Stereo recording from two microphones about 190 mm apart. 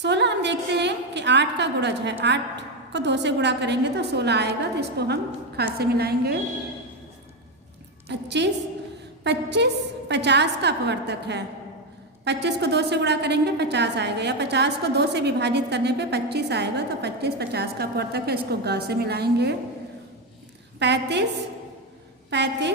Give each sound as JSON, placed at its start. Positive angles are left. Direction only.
{"t": 0.0, "sound": "a woman's voice", "side_deg": -65}
{"t": 8.1, "sound": "a woman's voice", "side_deg": -65}
{"t": 20.7, "sound": "a woman's voice", "side_deg": -65}
{"t": 22.3, "sound": "a woman's voice", "side_deg": -65}